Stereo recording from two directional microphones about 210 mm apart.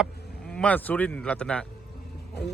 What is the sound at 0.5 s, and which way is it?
Speech, 5° left (ahead or behind).